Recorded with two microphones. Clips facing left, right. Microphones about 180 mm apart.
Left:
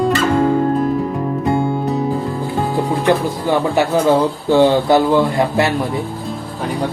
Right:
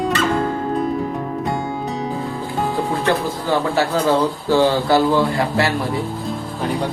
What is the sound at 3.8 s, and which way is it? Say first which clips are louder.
Speech: left 4 dB; 15° left (ahead or behind).